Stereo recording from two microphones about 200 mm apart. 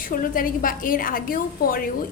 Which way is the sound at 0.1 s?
45° left (ahead or behind).